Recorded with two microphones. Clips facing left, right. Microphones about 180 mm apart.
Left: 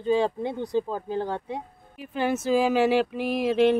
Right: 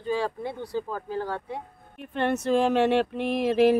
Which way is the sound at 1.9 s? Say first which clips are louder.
Even; 5° left (ahead or behind).